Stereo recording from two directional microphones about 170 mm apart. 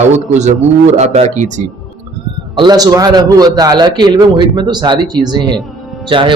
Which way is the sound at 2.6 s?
25° right (ahead or behind).